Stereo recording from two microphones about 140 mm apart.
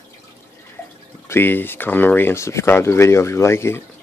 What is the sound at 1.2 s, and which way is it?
Speech, 15° left (ahead or behind).